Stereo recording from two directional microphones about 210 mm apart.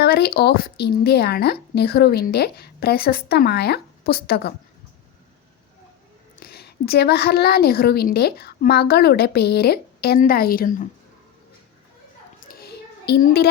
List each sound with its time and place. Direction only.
0.0 s speech: 50° left (ahead or behind)
6.4 s speech: 50° left (ahead or behind)
12.4 s a sound: 50° left (ahead or behind)